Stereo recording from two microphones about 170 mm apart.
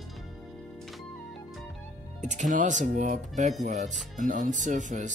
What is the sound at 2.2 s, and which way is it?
Speech, 45° right (ahead or behind).